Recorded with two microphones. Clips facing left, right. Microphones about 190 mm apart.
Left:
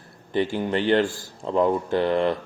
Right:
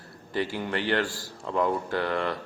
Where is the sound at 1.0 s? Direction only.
50° left (ahead or behind).